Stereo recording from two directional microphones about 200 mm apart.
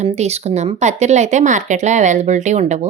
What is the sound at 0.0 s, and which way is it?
Speech, 30° right (ahead or behind).